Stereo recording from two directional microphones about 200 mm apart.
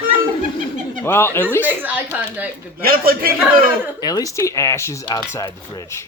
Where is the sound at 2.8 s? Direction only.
45° right (ahead or behind).